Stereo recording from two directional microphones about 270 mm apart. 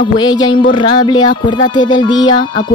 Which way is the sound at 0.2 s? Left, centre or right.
Centre.